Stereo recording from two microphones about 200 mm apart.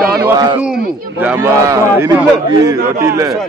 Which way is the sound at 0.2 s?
15° right (ahead or behind).